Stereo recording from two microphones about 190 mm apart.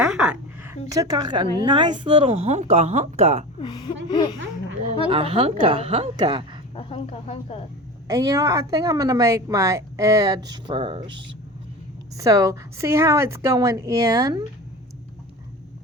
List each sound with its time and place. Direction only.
0.0 s a sound: 5° right (ahead or behind)
0.9 s a woman's voice: 20° right (ahead or behind)
3.6 s speech: 25° left (ahead or behind)
5.0 s a woman's voice: 30° right (ahead or behind)
6.7 s speech: 30° left (ahead or behind)
8.0 s a woman's voice: 20° right (ahead or behind)